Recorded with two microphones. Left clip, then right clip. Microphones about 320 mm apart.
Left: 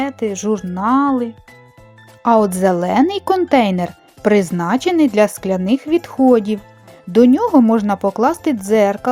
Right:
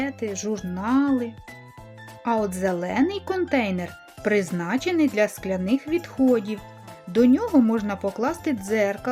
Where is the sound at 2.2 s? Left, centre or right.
Centre.